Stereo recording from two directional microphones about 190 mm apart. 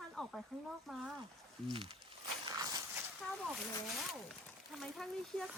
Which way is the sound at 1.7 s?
25° right (ahead or behind).